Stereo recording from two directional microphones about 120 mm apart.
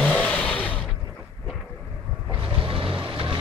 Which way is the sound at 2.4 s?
45° right (ahead or behind).